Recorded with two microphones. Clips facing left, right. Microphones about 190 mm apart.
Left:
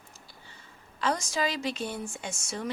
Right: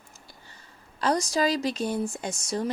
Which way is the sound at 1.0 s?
40° right (ahead or behind).